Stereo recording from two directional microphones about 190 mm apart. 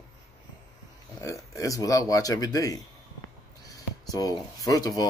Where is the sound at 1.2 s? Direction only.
15° left (ahead or behind).